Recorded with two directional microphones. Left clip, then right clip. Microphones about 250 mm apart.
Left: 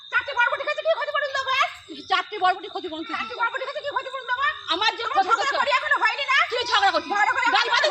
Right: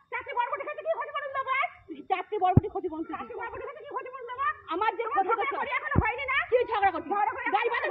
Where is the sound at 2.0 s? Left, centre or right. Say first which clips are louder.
Left 5 dB; left.